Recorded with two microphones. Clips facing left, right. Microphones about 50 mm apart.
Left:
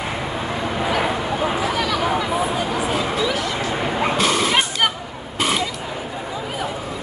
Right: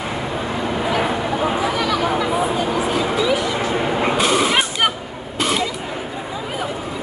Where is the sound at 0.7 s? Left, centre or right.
Centre.